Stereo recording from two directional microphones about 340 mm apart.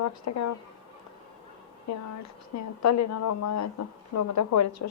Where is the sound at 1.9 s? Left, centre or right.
Left.